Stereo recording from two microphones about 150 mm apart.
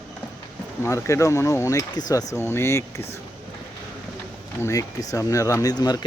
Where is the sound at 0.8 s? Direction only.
20° left (ahead or behind).